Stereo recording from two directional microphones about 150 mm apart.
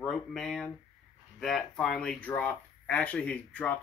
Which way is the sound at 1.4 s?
Centre (ahead or behind).